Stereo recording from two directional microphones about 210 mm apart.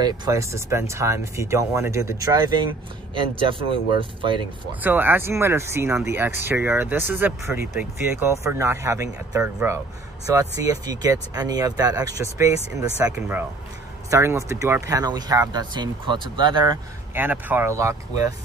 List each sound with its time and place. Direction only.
0.0 s speech: 15° right (ahead or behind)
4.8 s speech: 10° right (ahead or behind)
17.1 s speech: 10° right (ahead or behind)